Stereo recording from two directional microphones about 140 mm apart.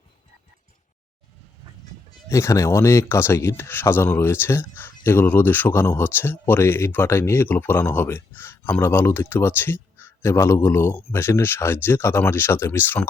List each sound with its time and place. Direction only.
2.3 s speech: 20° left (ahead or behind)